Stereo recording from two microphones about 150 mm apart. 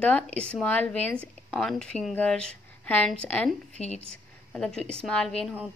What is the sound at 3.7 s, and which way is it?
Speech, 45° left (ahead or behind).